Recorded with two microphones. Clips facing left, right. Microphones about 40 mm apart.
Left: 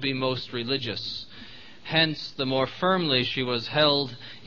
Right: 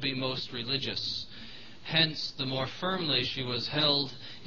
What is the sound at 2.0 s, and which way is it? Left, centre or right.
Speech, left.